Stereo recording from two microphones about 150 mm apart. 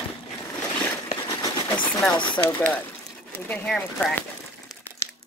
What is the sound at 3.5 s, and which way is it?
Speech, 5° left (ahead or behind).